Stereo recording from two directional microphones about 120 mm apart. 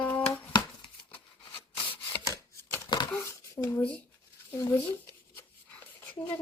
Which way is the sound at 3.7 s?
10° left (ahead or behind).